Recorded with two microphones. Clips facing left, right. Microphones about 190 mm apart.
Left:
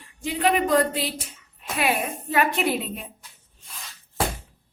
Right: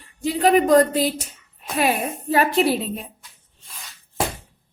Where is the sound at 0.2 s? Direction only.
40° right (ahead or behind).